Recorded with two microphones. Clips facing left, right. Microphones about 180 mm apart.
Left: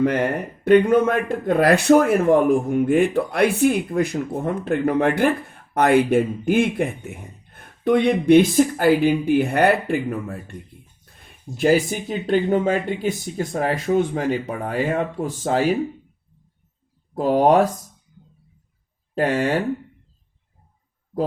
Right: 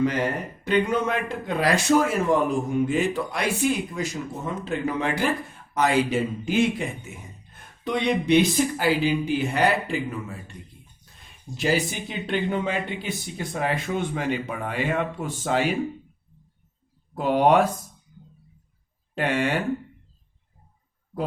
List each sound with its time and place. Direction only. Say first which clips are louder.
0.0 s speech: left 4 dB; 55° left (ahead or behind); by 15.8 s 40° left (ahead or behind)
17.2 s speech: left 3 dB; 35° left (ahead or behind)
19.1 s speech: left 4 dB; 35° left (ahead or behind)